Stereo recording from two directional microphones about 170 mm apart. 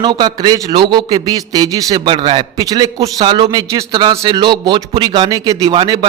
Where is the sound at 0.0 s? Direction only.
25° right (ahead or behind).